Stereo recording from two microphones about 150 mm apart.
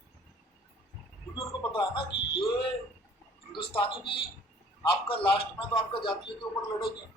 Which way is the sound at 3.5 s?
35° left (ahead or behind).